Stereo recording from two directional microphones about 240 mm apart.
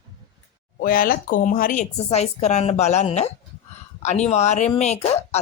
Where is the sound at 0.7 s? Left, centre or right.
Left.